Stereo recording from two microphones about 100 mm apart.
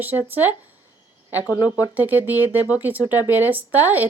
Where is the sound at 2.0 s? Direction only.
15° right (ahead or behind).